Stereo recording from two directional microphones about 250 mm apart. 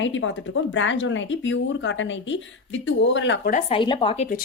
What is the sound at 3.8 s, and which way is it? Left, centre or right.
Speech, centre.